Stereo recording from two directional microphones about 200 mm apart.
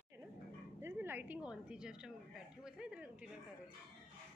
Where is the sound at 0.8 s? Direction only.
10° right (ahead or behind).